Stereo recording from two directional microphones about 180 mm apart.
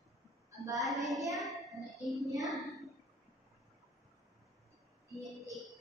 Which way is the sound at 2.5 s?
Centre (ahead or behind).